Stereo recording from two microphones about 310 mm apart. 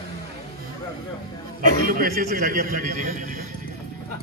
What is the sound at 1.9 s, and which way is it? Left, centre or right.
A man's voice, right.